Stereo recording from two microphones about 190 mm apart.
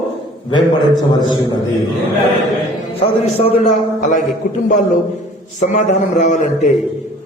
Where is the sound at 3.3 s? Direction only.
35° left (ahead or behind).